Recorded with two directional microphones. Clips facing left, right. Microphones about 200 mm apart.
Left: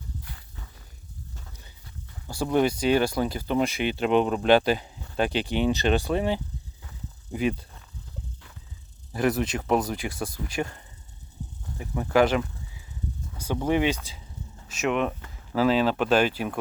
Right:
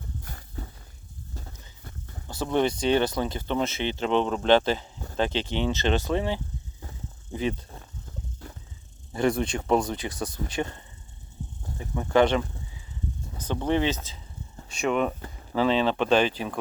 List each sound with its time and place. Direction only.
0.2 s walk: 45° right (ahead or behind)
1.8 s a sound: 45° right (ahead or behind)
2.4 s speech: 10° left (ahead or behind)
9.1 s speech: 5° left (ahead or behind)
10.2 s speech: 25° right (ahead or behind)
11.9 s speech: 5° left (ahead or behind)